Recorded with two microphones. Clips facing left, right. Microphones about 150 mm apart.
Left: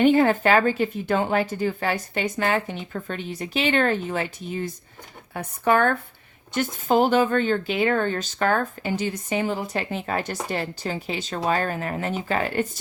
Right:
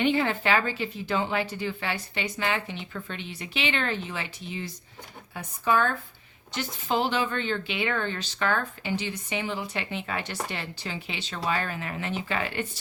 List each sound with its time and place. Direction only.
0.0 s speech: 45° left (ahead or behind)
5.3 s speech: 60° left (ahead or behind)
6.5 s speech: 50° left (ahead or behind)